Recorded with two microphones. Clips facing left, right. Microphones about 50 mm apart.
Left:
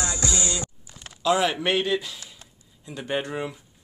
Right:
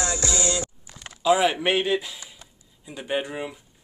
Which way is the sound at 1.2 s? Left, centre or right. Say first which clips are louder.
Right 2 dB; centre.